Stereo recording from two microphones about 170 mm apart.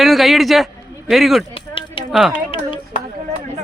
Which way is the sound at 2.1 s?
Centre (ahead or behind).